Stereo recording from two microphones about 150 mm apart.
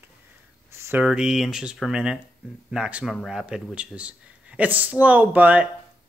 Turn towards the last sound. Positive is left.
turn(degrees=-10)  # may be behind; listen again after turning